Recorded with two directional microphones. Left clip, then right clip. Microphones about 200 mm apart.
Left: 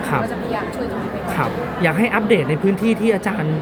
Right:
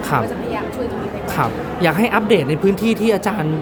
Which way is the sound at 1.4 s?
20° right (ahead or behind).